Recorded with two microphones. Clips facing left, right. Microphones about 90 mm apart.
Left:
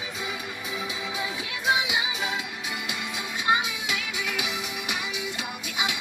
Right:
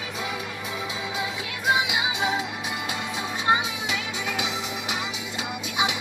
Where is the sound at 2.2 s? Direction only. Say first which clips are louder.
Right 5 dB; 30° right (ahead or behind).